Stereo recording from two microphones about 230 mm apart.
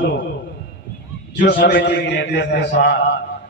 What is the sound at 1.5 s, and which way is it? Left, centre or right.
A man's voice, left.